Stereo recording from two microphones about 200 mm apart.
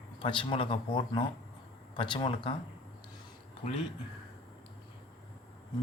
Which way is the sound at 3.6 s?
30° left (ahead or behind).